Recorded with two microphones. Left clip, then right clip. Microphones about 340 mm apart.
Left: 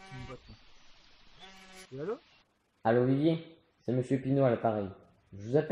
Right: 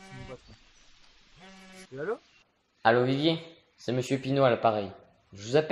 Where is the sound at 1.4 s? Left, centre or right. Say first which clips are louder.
Right 1 dB; centre.